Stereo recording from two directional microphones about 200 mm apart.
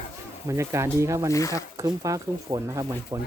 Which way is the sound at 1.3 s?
15° left (ahead or behind).